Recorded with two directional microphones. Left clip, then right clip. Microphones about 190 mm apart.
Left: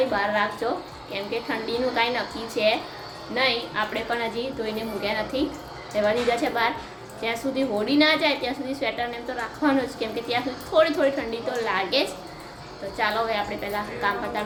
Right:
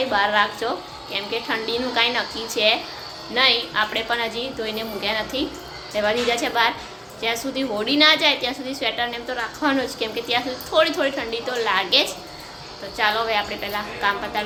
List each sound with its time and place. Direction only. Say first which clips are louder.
0.1 s a woman's voice: right 5 dB; centre (ahead or behind)